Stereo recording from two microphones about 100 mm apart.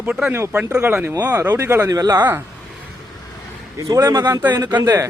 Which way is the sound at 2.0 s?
35° right (ahead or behind).